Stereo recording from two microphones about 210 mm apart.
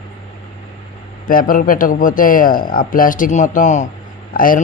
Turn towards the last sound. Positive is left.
turn(degrees=40)  # may be behind; listen again after turning